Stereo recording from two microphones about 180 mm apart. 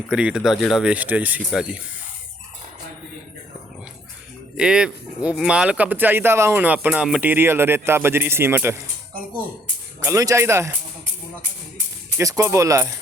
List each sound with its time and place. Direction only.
0.1 s speech: 5° right (ahead or behind)
4.5 s speech: 5° right (ahead or behind)
10.0 s speech: 15° right (ahead or behind)
12.1 s speech: 15° right (ahead or behind)